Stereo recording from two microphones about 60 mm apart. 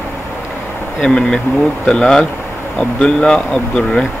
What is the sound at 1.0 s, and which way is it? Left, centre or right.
Speech, centre.